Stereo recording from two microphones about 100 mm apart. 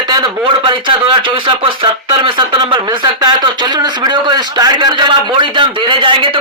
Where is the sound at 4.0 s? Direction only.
45° right (ahead or behind).